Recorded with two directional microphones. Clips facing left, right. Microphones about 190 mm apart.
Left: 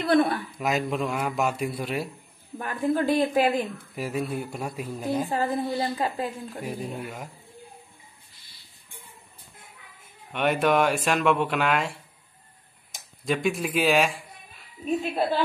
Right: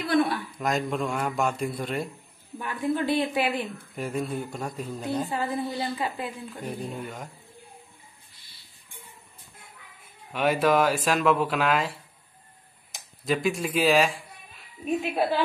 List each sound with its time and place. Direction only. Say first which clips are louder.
0.6 s speech: even; 5° left (ahead or behind)
2.6 s a woman's voice: left 2 dB; 40° left (ahead or behind)
3.5 s a woman's voice: left 3 dB; 5° left (ahead or behind)
5.3 s a woman's voice: left 3 dB; 40° left (ahead or behind)
6.6 s a woman's voice: even; 5° left (ahead or behind)
10.3 s speech: even; 5° right (ahead or behind)
13.2 s speech: even; centre (ahead or behind)
15.0 s speech: even; 10° right (ahead or behind)